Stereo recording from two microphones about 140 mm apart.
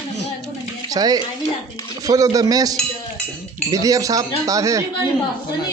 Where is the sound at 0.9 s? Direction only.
30° right (ahead or behind).